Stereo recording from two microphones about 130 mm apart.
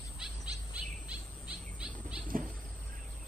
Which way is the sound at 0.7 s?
10° right (ahead or behind).